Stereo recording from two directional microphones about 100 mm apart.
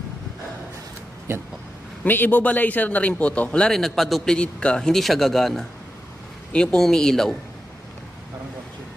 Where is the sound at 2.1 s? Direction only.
20° left (ahead or behind).